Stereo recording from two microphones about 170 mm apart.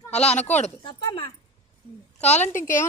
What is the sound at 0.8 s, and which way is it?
Speech, 25° left (ahead or behind).